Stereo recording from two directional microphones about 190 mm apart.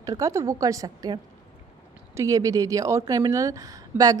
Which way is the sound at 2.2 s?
15° right (ahead or behind).